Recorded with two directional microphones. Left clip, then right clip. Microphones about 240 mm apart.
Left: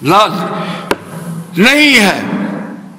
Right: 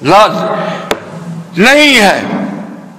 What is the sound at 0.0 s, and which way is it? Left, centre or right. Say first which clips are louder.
A man's voice: right 3 dB; left.